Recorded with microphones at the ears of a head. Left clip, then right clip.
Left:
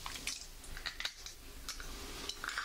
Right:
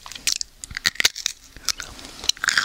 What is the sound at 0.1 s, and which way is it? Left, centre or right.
Crunch, right.